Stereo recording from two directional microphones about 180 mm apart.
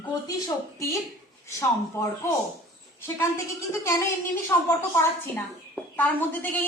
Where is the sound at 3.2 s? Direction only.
15° left (ahead or behind).